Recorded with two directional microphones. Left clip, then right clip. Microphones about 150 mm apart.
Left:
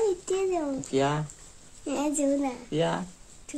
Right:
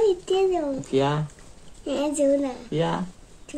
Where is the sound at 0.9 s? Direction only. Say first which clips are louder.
Right 3 dB; centre (ahead or behind).